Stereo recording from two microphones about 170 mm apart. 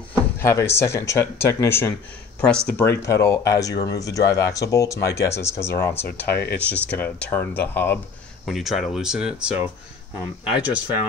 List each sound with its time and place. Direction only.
0.4 s speech: 15° left (ahead or behind)
2.4 s speech: 5° left (ahead or behind)
2.9 s speech: 20° left (ahead or behind)
8.5 s speech: centre (ahead or behind)